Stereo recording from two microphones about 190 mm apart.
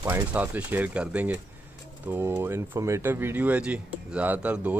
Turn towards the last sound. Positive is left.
turn(degrees=-5)  # may be behind; listen again after turning